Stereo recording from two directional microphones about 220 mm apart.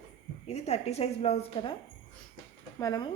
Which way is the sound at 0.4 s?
30° left (ahead or behind).